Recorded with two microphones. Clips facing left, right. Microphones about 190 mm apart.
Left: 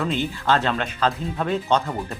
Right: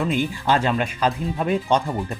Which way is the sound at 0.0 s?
10° right (ahead or behind).